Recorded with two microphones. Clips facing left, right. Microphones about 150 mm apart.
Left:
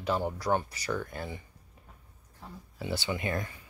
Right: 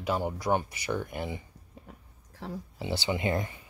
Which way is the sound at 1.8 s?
90° right.